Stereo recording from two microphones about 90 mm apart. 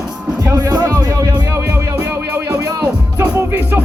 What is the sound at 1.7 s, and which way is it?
Music, 20° right (ahead or behind).